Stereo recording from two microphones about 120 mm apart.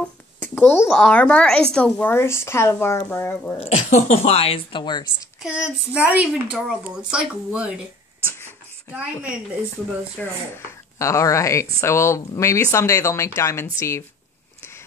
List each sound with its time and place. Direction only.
0.0 s a sound: 10° left (ahead or behind)
0.8 s speech: 5° left (ahead or behind)
2.0 s speech: 20° left (ahead or behind)
3.5 s speech: 55° left (ahead or behind)
5.4 s speech: 10° right (ahead or behind)
10.2 s speech: 10° left (ahead or behind)
10.5 s speech: 25° left (ahead or behind)